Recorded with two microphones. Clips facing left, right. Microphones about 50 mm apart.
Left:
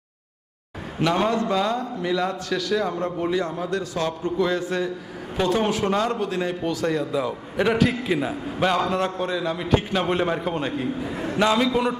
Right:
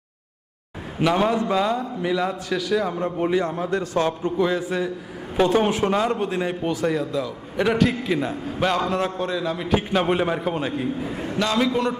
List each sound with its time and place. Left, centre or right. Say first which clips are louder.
0.9 s a man's voice: right 1 dB; centre
3.2 s a man's voice: right 5 dB; right
4.4 s a man's voice: right 1 dB; centre
5.4 s a man's voice: right 3 dB; right
5.9 s a man's voice: right 1 dB; centre
6.1 s a man's voice: right 1 dB; right
6.8 s a man's voice: left 1 dB; centre
11.4 s a man's voice: left 4 dB; left